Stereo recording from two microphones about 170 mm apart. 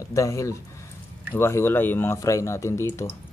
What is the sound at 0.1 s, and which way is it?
Speech, 20° left (ahead or behind).